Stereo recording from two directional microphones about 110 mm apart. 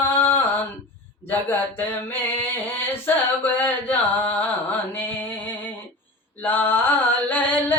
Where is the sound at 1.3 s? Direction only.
20° left (ahead or behind).